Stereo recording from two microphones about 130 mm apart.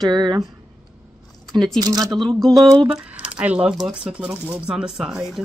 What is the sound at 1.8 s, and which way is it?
Speech, 30° right (ahead or behind).